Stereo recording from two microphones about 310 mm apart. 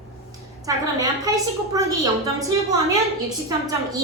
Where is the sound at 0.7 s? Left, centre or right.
Centre.